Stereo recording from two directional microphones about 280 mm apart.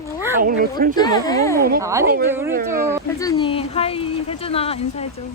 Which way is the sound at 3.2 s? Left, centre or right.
Centre.